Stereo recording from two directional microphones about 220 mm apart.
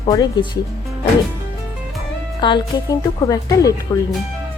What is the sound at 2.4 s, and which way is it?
Speech, 20° left (ahead or behind).